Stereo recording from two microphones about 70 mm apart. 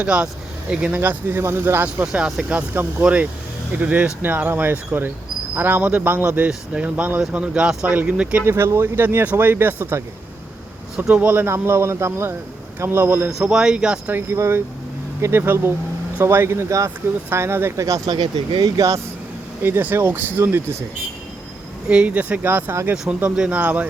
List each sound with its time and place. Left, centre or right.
0.0 s speech: centre
0.9 s speech: right
1.4 s speech: right; by 8.4 s centre
8.4 s speech: right
11.1 s speech: right
13.4 s speech: centre
14.1 s speech: right
18.1 s speech: right
19.6 s speech: right
21.8 s speech: centre
23.3 s speech: centre
23.6 s speech: right